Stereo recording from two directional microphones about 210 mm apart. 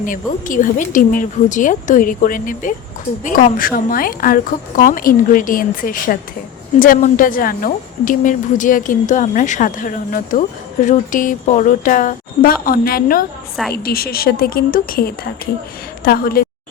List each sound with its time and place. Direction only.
0.0 s a woman's voice: 40° left (ahead or behind)